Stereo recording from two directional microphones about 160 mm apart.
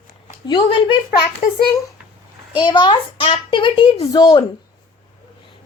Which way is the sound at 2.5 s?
30° left (ahead or behind).